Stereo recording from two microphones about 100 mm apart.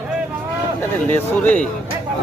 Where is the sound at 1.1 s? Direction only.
15° left (ahead or behind).